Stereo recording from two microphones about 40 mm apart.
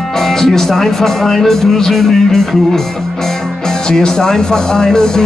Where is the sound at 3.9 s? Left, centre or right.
Centre.